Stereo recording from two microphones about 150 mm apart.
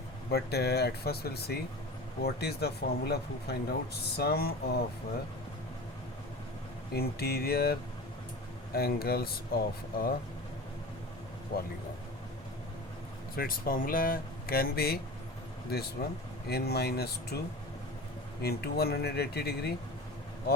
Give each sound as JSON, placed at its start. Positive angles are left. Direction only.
{"t": 0.3, "sound": "speech", "side_deg": 90}
{"t": 6.9, "sound": "speech", "side_deg": 90}
{"t": 13.3, "sound": "speech", "side_deg": 75}
{"t": 16.0, "sound": "speech", "side_deg": 90}
{"t": 18.4, "sound": "speech", "side_deg": 90}